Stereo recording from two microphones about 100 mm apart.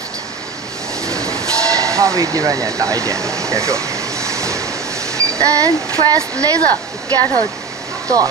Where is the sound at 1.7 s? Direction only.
30° right (ahead or behind).